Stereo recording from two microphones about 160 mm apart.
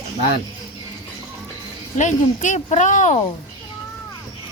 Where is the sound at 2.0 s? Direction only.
50° left (ahead or behind).